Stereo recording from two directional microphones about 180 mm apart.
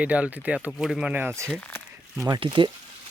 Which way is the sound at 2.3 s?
25° right (ahead or behind).